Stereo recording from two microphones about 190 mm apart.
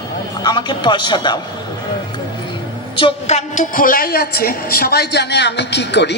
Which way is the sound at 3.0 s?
35° left (ahead or behind).